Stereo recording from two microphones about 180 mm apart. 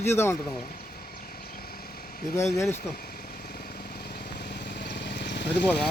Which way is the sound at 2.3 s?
15° left (ahead or behind).